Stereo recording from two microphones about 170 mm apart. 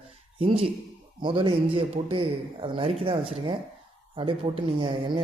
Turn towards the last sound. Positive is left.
turn(degrees=-35)  # may be behind; listen again after turning